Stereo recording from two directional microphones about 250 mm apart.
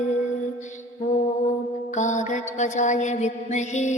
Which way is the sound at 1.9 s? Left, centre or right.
Left.